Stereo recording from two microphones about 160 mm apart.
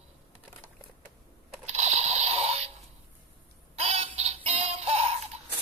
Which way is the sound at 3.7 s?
40° right (ahead or behind).